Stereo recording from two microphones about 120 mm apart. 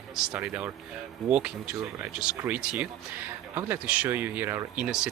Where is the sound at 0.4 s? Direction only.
10° right (ahead or behind).